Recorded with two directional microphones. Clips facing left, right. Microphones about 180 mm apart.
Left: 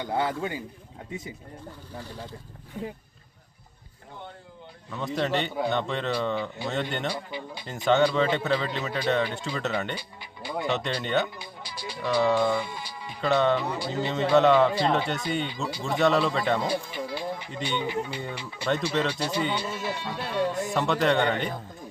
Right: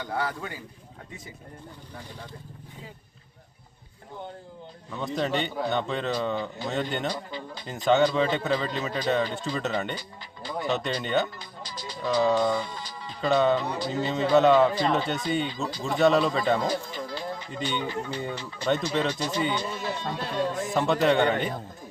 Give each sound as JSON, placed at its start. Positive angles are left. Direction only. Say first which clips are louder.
{"t": 0.0, "sound": "a man's voice", "louder": "left 3 dB", "side_deg": 25}
{"t": 4.9, "sound": "a man's voice", "louder": "even", "side_deg": 0}
{"t": 7.3, "sound": "speech", "louder": "left 1 dB", "side_deg": 15}
{"t": 7.9, "sound": "a man's voice", "louder": "even", "side_deg": 0}
{"t": 13.2, "sound": "a man's voice", "louder": "right 1 dB", "side_deg": 0}